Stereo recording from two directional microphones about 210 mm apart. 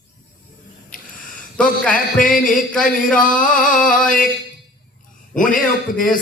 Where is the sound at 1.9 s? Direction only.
40° left (ahead or behind).